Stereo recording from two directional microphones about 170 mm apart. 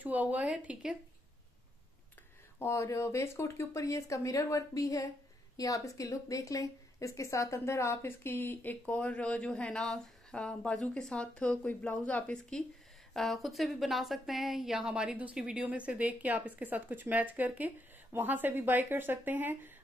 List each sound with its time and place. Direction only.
0.0 s a woman's voice: 10° right (ahead or behind)
2.6 s a woman's voice: 15° left (ahead or behind); by 19.7 s 10° right (ahead or behind)